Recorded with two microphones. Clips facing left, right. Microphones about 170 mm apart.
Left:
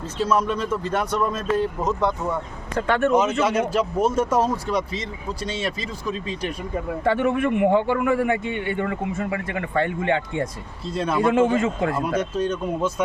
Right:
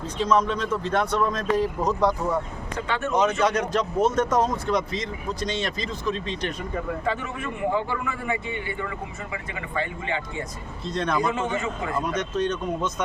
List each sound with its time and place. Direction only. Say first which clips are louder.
0.2 s speech: left 1 dB; 10° left (ahead or behind)
2.7 s a man's voice: left 8 dB; 55° left (ahead or behind)
3.1 s speech: right 2 dB; 5° left (ahead or behind)
7.0 s a man's voice: left 8 dB; 65° left (ahead or behind)
10.8 s speech: left 1 dB; 5° left (ahead or behind)
11.5 s speech: left 7 dB; 50° left (ahead or behind)
12.4 s speech: left 2 dB; 10° left (ahead or behind)